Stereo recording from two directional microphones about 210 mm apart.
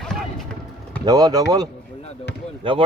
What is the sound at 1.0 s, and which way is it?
Speech, 15° right (ahead or behind).